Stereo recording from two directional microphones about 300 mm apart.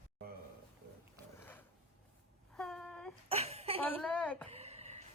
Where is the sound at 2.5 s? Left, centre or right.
Centre.